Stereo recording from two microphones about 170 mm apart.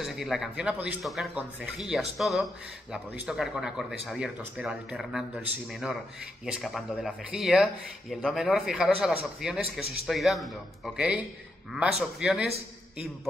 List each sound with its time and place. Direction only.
0.0 s speech: centre (ahead or behind)
11.7 s speech: 5° right (ahead or behind)